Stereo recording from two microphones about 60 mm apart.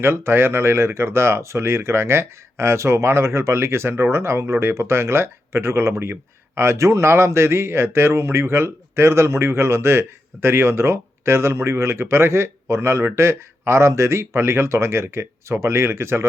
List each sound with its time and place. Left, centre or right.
0.0 s speech: right